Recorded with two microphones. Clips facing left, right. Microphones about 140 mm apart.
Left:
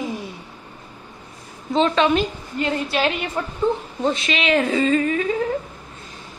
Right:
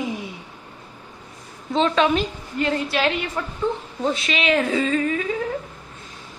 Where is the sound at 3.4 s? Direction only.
25° left (ahead or behind).